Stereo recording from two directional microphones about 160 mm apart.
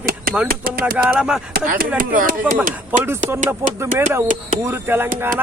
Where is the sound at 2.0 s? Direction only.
60° right (ahead or behind).